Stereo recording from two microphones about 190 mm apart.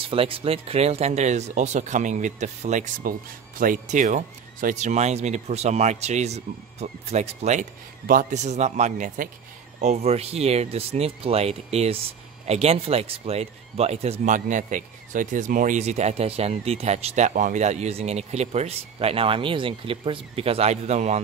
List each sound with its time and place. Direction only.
0.0 s speech: 30° right (ahead or behind)